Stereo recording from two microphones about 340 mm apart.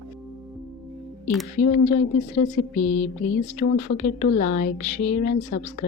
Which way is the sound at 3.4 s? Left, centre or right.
Left.